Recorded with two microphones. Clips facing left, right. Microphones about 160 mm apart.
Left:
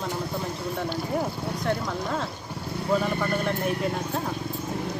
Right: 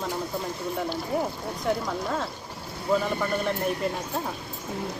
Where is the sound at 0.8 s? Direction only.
Centre (ahead or behind).